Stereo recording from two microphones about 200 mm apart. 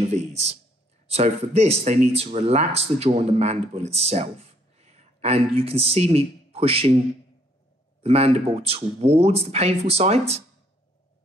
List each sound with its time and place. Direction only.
0.0 s speech: 35° right (ahead or behind)
8.0 s speech: 30° right (ahead or behind)